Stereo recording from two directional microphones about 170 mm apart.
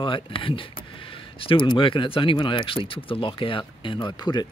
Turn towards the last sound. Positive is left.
turn(degrees=25)  # may be behind; listen again after turning